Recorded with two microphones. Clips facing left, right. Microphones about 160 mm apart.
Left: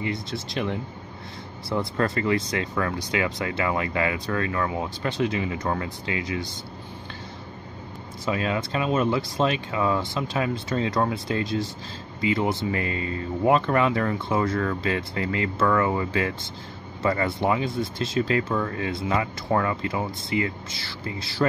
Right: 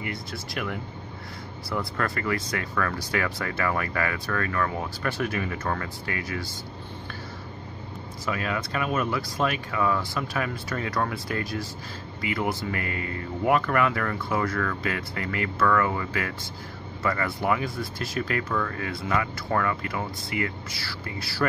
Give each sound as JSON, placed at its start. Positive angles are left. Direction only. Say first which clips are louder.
{"t": 0.0, "sound": "speech", "louder": "left 5 dB", "side_deg": 25}
{"t": 8.3, "sound": "speech", "louder": "left 3 dB", "side_deg": 25}